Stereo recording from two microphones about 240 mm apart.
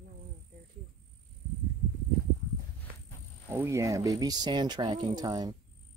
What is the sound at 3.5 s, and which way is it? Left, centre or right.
Speech, centre.